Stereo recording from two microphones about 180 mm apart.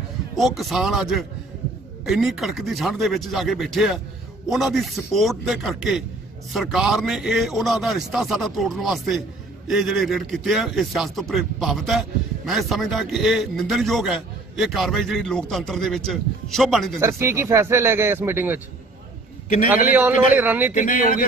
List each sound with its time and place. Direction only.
0.4 s a man's voice: centre (ahead or behind)
17.0 s speech: 15° right (ahead or behind)
19.9 s speech: 10° right (ahead or behind)
20.7 s speech: 50° left (ahead or behind)